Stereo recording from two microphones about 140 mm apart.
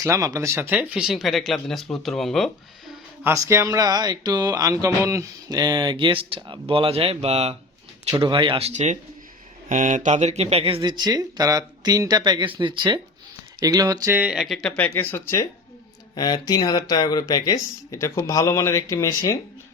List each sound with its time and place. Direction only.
0.0 s speech: 25° right (ahead or behind); by 2.5 s centre (ahead or behind)
3.2 s speech: 20° right (ahead or behind); by 7.5 s 50° right (ahead or behind)
8.2 s speech: 35° right (ahead or behind)
9.6 s speech: 65° right (ahead or behind); by 14.2 s 25° right (ahead or behind)
14.2 s speech: 5° right (ahead or behind)
14.8 s speech: 20° left (ahead or behind)